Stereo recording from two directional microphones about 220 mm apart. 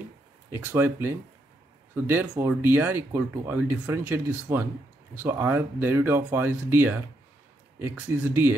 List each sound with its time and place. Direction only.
0.5 s speech: 10° right (ahead or behind)